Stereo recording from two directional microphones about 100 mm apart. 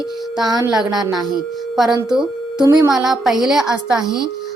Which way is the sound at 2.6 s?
45° right (ahead or behind).